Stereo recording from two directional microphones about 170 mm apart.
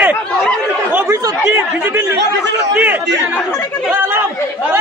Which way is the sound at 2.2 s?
90° right.